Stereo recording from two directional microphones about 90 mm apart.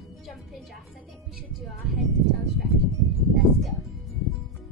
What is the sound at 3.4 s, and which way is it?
Music, centre (ahead or behind).